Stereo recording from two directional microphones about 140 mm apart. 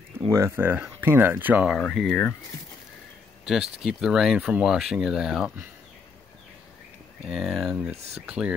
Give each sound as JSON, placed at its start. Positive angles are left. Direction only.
{"t": 0.3, "sound": "speech", "side_deg": -20}
{"t": 1.8, "sound": "speech", "side_deg": 5}
{"t": 3.4, "sound": "speech", "side_deg": 0}
{"t": 7.2, "sound": "speech", "side_deg": 0}